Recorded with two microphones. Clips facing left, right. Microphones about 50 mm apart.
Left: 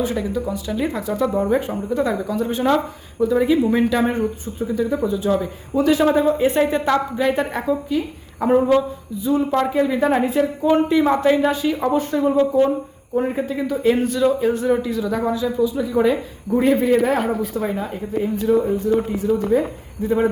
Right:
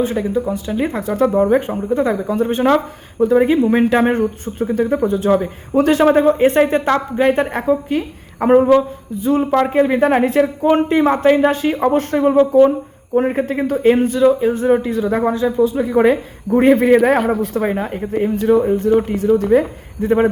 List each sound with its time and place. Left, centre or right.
0.0 s a man's voice: right
13.8 s speech: right
14.2 s a sound: centre
14.5 s a man's voice: right